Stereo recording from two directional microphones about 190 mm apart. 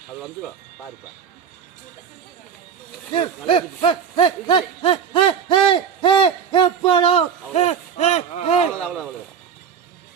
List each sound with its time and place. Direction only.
3.1 s speech: 25° left (ahead or behind)